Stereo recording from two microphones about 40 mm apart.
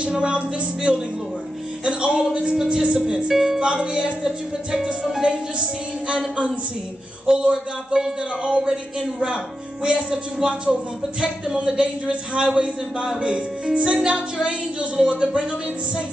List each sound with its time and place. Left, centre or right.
0.0 s music: right
1.9 s speech: right
3.3 s music: centre
3.6 s speech: right
9.8 s speech: centre